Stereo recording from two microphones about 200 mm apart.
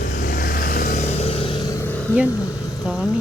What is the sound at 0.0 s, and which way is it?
Vehicle, 45° left (ahead or behind).